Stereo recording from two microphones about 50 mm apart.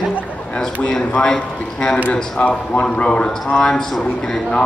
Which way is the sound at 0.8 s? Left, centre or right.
Centre.